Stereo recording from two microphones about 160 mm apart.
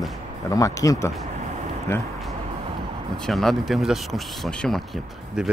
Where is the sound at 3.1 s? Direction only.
5° left (ahead or behind).